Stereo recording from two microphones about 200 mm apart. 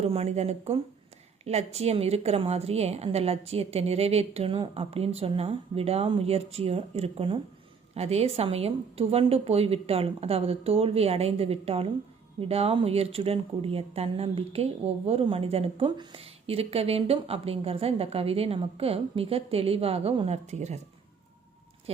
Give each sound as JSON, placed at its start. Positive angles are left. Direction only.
{"t": 0.0, "sound": "a woman's voice", "side_deg": -30}